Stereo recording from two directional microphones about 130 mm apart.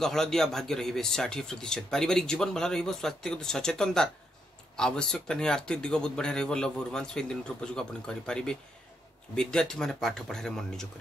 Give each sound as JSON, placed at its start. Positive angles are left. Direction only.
{"t": 0.0, "sound": "speech", "side_deg": 5}